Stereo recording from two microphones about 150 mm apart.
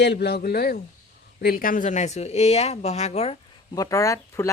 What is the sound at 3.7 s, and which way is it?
Speech, 25° left (ahead or behind).